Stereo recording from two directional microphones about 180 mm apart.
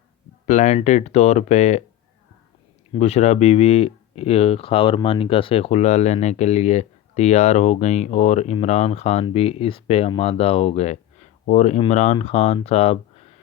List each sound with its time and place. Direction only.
0.4 s speech: 40° left (ahead or behind)
2.9 s speech: 35° left (ahead or behind)